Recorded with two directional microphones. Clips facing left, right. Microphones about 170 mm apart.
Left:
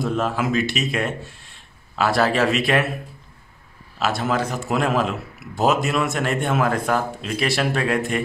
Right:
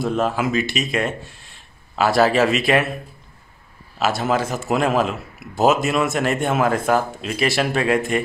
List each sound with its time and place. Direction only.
0.0 s a man's voice: centre (ahead or behind)
4.0 s a man's voice: 5° right (ahead or behind)